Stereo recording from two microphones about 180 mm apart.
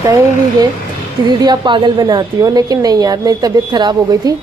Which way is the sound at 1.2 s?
25° right (ahead or behind).